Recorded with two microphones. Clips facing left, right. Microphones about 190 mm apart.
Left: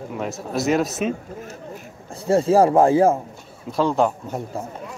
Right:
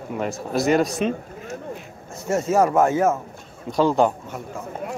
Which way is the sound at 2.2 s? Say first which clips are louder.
Left 4 dB; 30° left (ahead or behind).